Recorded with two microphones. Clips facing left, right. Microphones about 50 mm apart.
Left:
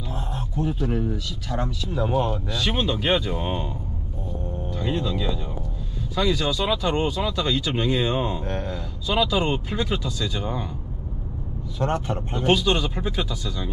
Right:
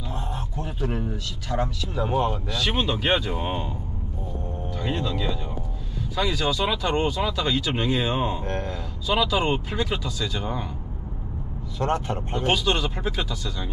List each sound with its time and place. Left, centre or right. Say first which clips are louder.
0.1 s speech: left 1 dB; centre
4.8 s speech: left 2 dB; centre
5.1 s speech: left 1 dB; centre
11.8 s speech: even; centre
12.3 s speech: left 3 dB; centre